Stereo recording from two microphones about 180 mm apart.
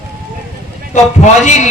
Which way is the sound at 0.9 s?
40° left (ahead or behind).